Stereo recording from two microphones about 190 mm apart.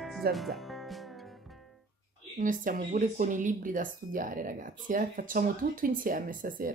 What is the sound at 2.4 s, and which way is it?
Speech, 45° right (ahead or behind).